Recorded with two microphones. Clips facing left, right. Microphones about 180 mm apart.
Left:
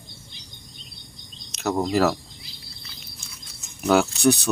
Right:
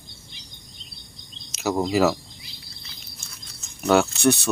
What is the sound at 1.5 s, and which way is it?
Speech, 5° right (ahead or behind).